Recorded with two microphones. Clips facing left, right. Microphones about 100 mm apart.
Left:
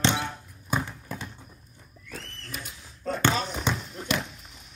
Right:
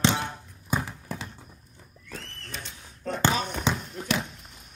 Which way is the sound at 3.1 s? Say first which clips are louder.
Even; 15° right (ahead or behind).